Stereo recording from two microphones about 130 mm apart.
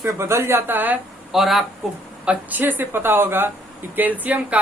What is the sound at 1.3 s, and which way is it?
Speech, centre (ahead or behind).